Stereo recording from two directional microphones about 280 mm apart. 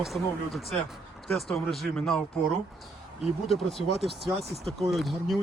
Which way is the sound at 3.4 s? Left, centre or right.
Centre.